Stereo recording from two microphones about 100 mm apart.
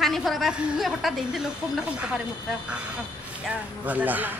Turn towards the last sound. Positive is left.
turn(degrees=-15)  # may be behind; listen again after turning